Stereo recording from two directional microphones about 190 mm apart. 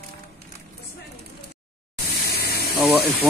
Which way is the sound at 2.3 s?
55° left (ahead or behind).